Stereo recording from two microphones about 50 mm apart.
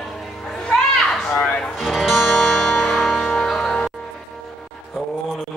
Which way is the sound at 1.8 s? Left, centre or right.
Centre.